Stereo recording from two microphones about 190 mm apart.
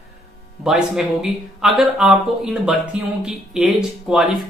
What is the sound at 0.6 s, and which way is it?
Speech, 5° right (ahead or behind).